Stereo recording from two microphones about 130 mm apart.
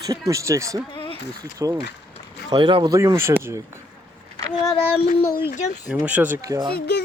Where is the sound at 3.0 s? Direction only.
20° right (ahead or behind).